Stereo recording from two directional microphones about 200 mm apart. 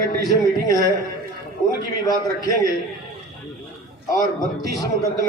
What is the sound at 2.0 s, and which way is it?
Speech, 20° left (ahead or behind).